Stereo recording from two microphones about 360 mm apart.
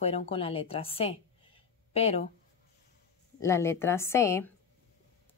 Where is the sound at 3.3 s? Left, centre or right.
Centre.